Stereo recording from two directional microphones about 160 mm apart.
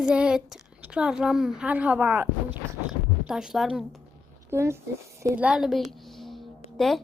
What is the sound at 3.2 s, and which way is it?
Speech, 5° right (ahead or behind).